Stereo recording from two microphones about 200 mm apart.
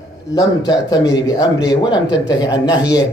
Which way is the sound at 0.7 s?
20° left (ahead or behind).